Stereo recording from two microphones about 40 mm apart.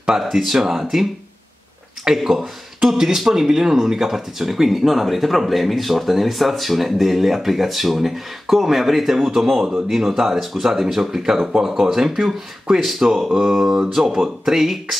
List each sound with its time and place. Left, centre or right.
0.3 s speech: centre
2.1 s speech: centre